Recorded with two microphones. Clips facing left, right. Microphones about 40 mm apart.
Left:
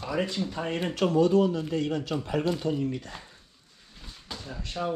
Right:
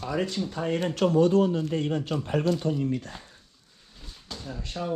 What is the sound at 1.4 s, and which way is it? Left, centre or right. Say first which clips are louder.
Speech: right 1 dB; right.